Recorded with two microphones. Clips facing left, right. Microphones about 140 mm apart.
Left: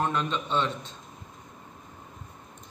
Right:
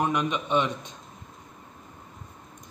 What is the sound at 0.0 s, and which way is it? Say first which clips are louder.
Speech: right 2 dB; 15° right (ahead or behind).